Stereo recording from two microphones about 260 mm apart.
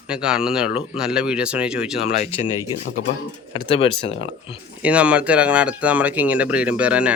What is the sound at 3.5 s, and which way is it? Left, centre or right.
Speech, left.